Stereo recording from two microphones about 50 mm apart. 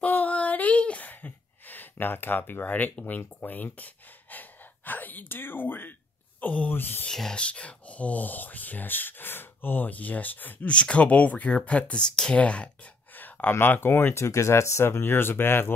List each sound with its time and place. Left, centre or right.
0.0 s female singing: left
1.0 s a sound: left
3.1 s speech: left
6.7 s speech: left
7.1 s speech: centre
7.3 s speech: left
10.7 s speech: left
13.1 s speech: left
14.2 s speech: left